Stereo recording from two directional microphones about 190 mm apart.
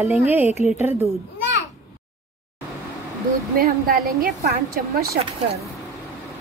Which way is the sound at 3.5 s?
50° right (ahead or behind).